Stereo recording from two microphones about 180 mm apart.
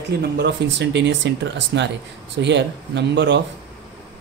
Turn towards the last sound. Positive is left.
turn(degrees=-75)  # may be behind; listen again after turning